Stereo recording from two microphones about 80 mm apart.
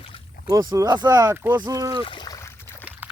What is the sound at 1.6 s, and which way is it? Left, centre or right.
Speech, right.